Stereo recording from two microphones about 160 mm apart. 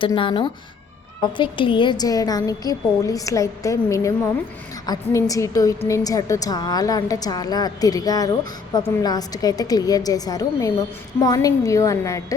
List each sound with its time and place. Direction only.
0.0 s a woman's voice: 30° left (ahead or behind)